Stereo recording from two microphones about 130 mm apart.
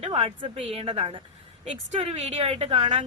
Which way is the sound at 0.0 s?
45° right (ahead or behind).